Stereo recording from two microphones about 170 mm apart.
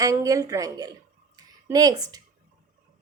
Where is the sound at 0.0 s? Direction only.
20° right (ahead or behind).